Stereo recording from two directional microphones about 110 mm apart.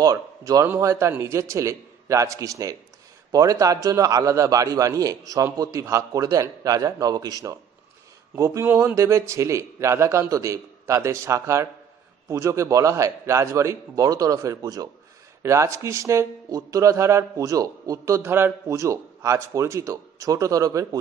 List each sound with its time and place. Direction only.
0.0 s a man's voice: 35° right (ahead or behind)